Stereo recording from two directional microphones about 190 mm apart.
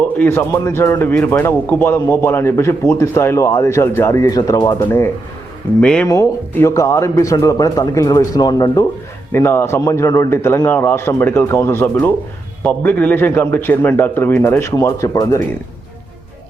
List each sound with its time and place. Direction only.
0.2 s a man's voice: 10° left (ahead or behind)
5.8 s a man's voice: 5° left (ahead or behind)